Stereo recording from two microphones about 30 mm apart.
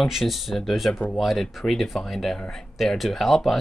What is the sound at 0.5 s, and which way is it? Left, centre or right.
Speech, centre.